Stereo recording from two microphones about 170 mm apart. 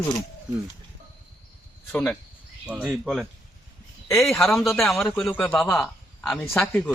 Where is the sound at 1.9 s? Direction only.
10° left (ahead or behind).